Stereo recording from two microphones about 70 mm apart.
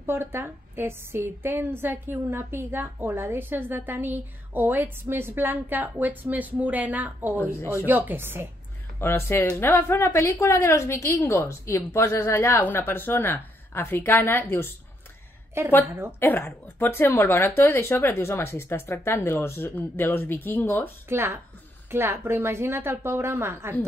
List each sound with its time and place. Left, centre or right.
0.0 s a woman's voice: right
7.5 s speech: left
7.8 s speech: right
9.0 s speech: left
15.8 s a woman's voice: right
16.2 s speech: left
21.1 s a woman's voice: right